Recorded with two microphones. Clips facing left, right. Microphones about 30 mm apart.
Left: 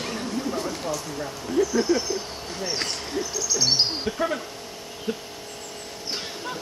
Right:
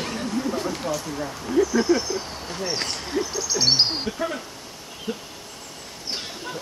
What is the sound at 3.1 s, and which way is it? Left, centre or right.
Owl, centre.